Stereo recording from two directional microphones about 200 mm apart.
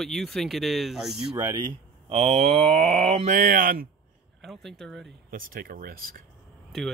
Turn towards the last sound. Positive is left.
turn(degrees=0)  # may be behind; listen again after turning